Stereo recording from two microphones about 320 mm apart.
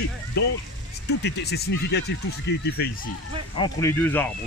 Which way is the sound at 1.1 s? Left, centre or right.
Left.